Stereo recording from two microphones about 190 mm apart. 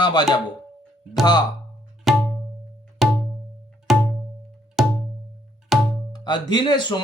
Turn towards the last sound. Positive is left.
turn(degrees=25)  # may be behind; listen again after turning